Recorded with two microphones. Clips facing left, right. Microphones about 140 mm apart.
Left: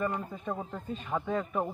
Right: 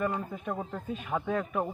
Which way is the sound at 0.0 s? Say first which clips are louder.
Right 1 dB; 5° right (ahead or behind).